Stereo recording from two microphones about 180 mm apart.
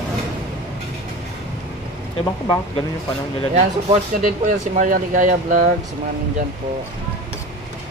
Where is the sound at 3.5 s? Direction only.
40° right (ahead or behind).